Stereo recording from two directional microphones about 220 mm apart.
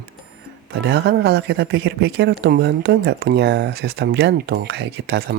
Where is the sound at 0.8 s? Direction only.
50° right (ahead or behind).